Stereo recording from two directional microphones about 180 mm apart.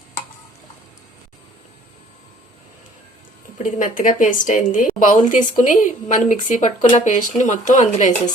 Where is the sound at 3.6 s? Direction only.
45° left (ahead or behind).